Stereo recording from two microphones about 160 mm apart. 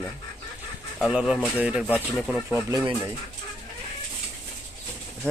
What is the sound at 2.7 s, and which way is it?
Speech, 25° right (ahead or behind).